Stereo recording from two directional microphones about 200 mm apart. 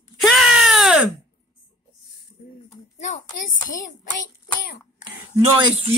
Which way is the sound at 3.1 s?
35° left (ahead or behind).